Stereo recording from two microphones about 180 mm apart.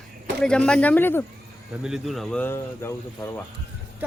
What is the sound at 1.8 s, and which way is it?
Speech, 5° right (ahead or behind).